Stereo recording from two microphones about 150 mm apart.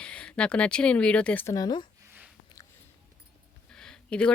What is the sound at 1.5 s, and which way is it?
Speech, 30° left (ahead or behind).